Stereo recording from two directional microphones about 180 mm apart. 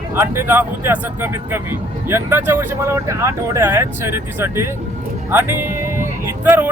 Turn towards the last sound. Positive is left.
turn(degrees=-10)  # may be behind; listen again after turning